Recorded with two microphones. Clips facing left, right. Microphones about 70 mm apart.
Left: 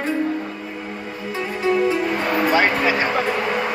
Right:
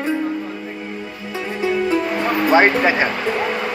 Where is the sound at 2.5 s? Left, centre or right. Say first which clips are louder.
Right 6 dB; right.